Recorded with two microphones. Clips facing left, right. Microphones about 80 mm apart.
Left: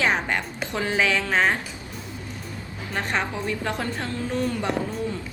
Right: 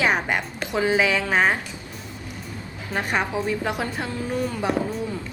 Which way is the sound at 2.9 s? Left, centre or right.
Centre.